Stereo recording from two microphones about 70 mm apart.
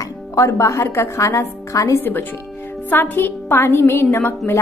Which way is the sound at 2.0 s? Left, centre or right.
Left.